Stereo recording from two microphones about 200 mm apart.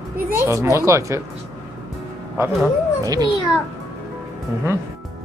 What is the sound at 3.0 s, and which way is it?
Speech, 15° right (ahead or behind).